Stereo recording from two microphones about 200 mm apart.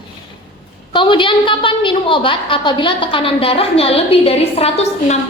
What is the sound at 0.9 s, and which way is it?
A woman's voice, 25° left (ahead or behind).